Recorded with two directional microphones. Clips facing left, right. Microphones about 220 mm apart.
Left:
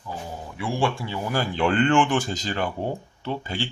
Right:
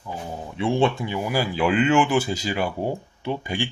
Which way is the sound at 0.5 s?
25° right (ahead or behind).